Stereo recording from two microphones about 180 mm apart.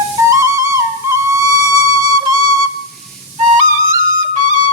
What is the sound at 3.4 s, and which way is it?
Flute, 40° right (ahead or behind).